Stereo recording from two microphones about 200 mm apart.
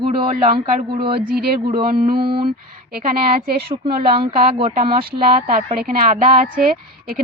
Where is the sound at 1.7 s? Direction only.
50° right (ahead or behind).